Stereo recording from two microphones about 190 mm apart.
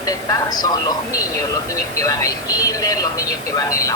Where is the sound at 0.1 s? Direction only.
20° left (ahead or behind).